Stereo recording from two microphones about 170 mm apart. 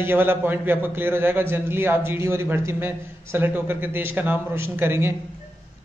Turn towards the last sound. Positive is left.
turn(degrees=-15)  # may be behind; listen again after turning